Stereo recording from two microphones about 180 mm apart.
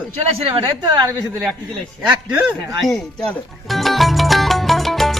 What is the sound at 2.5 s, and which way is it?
Speech, centre (ahead or behind).